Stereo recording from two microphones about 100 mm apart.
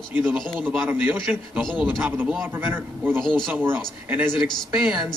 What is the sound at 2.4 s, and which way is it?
Speech, 20° right (ahead or behind).